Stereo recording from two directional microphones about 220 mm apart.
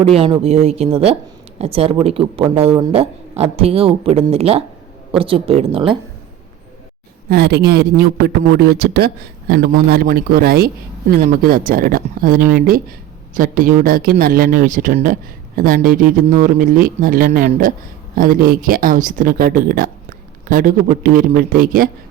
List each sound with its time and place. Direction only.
0.0 s speech: 25° right (ahead or behind)
7.3 s speech: 45° right (ahead or behind)